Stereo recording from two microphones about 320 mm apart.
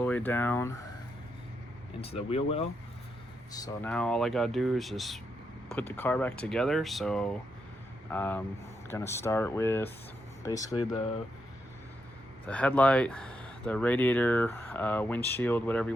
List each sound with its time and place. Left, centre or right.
0.0 s speech: centre
2.0 s speech: centre
12.5 s speech: centre